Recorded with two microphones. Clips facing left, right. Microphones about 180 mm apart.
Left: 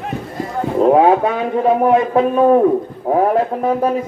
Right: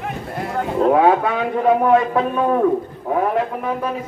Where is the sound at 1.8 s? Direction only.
30° left (ahead or behind).